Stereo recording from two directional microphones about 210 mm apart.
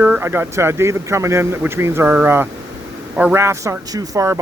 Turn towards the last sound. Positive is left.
turn(degrees=-15)  # may be behind; listen again after turning